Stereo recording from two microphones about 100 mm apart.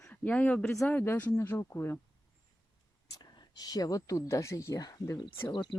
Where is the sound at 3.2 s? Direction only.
40° left (ahead or behind).